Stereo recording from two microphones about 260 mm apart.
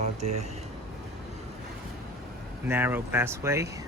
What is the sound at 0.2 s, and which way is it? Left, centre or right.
Speech, right.